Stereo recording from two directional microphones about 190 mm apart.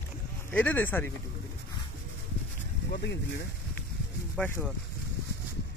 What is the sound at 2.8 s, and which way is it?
Speech, 55° left (ahead or behind).